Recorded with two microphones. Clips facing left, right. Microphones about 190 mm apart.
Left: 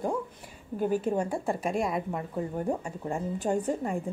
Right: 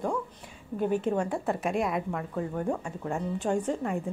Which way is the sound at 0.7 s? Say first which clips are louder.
Even; 5° left (ahead or behind).